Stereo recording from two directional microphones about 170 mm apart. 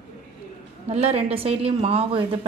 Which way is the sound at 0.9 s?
40° right (ahead or behind).